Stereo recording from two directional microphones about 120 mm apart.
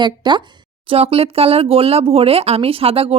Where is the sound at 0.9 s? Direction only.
55° right (ahead or behind).